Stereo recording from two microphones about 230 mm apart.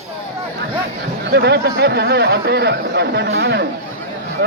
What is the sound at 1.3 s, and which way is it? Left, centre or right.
Speech, right.